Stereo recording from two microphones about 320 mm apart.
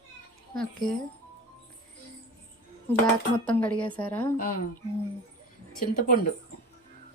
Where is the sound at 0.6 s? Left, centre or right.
Centre.